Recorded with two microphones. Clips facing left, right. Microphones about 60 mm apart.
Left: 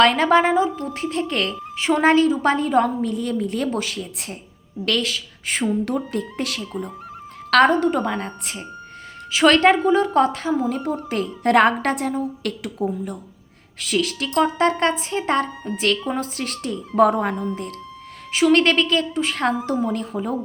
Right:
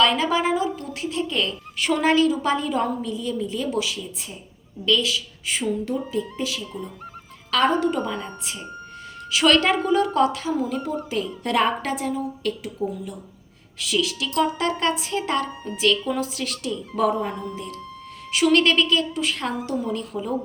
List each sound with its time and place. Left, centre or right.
0.0 s a woman's voice: left
0.5 s a woman's voice: left
1.0 s a woman's voice: left
1.8 s a woman's voice: left
5.8 s speech: left
7.5 s a woman's voice: left
10.8 s a woman's voice: left
13.7 s a woman's voice: left
17.1 s speech: left
18.3 s a woman's voice: left